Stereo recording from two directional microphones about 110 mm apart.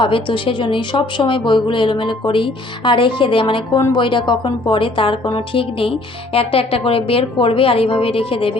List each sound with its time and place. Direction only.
0.0 s a woman's voice: 50° left (ahead or behind)
6.3 s a woman's voice: 60° left (ahead or behind)